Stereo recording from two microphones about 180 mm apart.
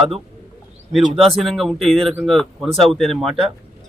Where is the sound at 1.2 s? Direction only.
Centre (ahead or behind).